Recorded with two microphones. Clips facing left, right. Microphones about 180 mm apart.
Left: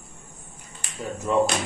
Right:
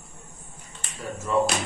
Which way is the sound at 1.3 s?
20° left (ahead or behind).